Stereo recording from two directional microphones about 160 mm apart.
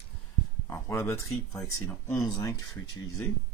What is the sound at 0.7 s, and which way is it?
Speech, 15° left (ahead or behind).